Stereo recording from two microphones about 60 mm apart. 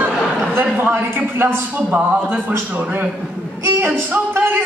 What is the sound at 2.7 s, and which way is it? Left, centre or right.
Speech, right.